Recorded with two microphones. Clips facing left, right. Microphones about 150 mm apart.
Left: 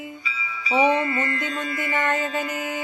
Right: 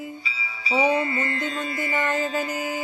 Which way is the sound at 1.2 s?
30° right (ahead or behind).